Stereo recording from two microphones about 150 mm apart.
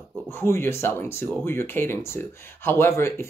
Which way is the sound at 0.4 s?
15° left (ahead or behind).